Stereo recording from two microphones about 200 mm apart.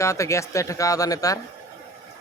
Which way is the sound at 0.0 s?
15° left (ahead or behind).